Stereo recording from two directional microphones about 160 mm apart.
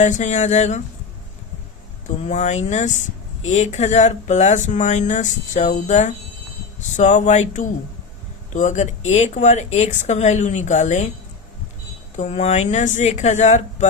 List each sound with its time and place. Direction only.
0.0 s speech: 50° left (ahead or behind)
2.0 s speech: 50° left (ahead or behind)
12.1 s speech: 45° left (ahead or behind)